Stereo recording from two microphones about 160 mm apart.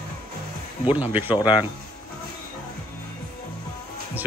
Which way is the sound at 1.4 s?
30° left (ahead or behind).